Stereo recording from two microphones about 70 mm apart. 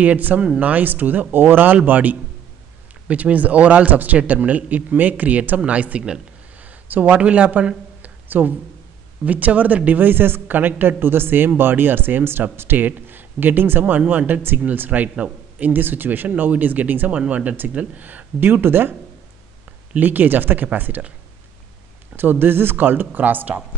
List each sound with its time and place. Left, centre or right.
0.0 s a woman's voice: right
15.7 s a woman's voice: right
22.1 s a woman's voice: right